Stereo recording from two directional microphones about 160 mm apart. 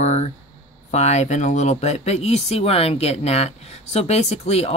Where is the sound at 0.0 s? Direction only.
45° left (ahead or behind).